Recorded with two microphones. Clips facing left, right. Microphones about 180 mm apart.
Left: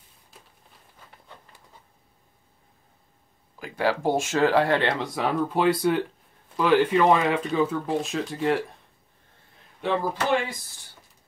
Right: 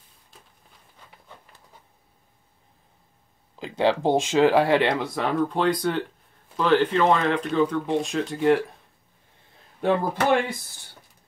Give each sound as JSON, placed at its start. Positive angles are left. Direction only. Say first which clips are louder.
{"t": 3.5, "sound": "speech", "louder": "right 3 dB", "side_deg": -25}
{"t": 5.1, "sound": "speech", "louder": "right 1 dB", "side_deg": 5}
{"t": 9.8, "sound": "speech", "louder": "right 3 dB", "side_deg": -55}